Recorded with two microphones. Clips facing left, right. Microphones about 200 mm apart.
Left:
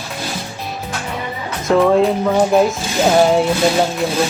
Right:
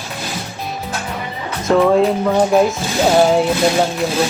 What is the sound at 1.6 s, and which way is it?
Speech, centre (ahead or behind).